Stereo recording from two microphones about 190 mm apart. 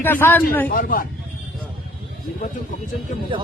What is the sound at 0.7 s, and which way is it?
Speech, 50° left (ahead or behind).